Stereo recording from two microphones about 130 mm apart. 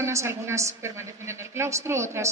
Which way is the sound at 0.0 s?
20° right (ahead or behind).